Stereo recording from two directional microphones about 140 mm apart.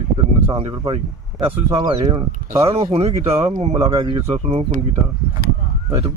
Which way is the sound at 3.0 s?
45° right (ahead or behind).